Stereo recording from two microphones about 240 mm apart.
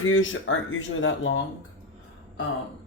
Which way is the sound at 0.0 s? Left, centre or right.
Left.